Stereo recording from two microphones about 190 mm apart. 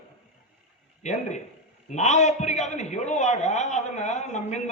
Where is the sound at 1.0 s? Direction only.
40° left (ahead or behind).